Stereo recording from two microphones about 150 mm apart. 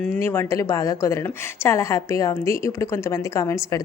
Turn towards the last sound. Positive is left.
turn(degrees=20)  # may be behind; listen again after turning